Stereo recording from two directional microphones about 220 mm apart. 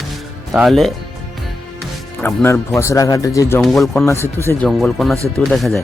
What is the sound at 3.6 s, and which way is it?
Speech, centre (ahead or behind).